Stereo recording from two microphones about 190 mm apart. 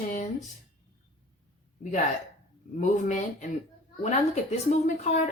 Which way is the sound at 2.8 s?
40° left (ahead or behind).